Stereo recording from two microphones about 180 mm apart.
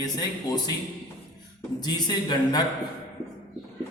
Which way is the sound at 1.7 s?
20° left (ahead or behind).